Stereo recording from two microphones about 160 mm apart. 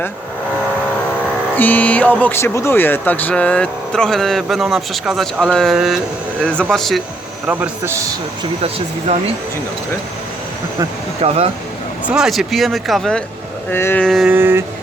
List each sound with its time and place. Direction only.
1.5 s speech: 10° left (ahead or behind)
7.4 s a man's voice: 10° right (ahead or behind)
9.1 s speech: 45° right (ahead or behind)
11.2 s speech: 40° right (ahead or behind)
12.0 s speech: 5° right (ahead or behind)
13.7 s speech: 15° left (ahead or behind)
14.3 s vehicle: 15° right (ahead or behind)